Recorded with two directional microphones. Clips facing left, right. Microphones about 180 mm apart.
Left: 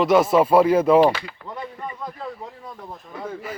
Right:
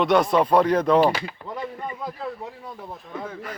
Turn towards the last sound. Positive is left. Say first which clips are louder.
# left 1 dB
turn(degrees=5)  # may be behind; listen again after turning